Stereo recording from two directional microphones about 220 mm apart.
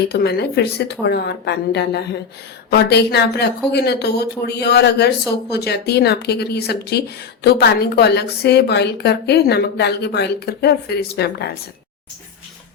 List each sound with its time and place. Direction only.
0.1 s speech: 45° left (ahead or behind)